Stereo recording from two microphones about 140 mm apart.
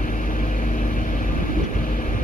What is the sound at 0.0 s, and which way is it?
Vehicle, 70° left (ahead or behind).